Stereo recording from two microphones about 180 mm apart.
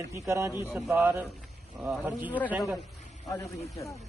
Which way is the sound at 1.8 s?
5° right (ahead or behind).